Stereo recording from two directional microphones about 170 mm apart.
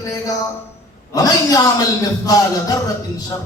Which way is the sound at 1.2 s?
20° left (ahead or behind).